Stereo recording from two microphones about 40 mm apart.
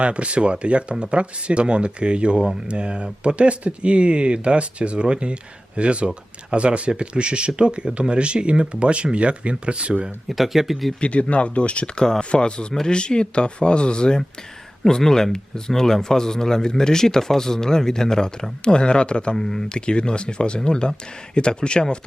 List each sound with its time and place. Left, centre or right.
0.0 s speech: right
10.2 s speech: centre
11.0 s speech: left
11.9 s speech: centre
19.4 s speech: centre
19.6 s speech: left